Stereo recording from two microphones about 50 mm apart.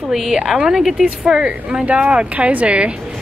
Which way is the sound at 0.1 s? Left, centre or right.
Centre.